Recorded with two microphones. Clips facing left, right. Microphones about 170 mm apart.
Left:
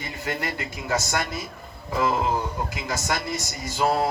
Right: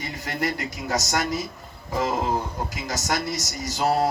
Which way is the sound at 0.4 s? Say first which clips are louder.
Right 3 dB; 40° right (ahead or behind).